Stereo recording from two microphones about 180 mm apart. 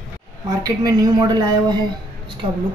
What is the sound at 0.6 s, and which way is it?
Speech, 20° right (ahead or behind).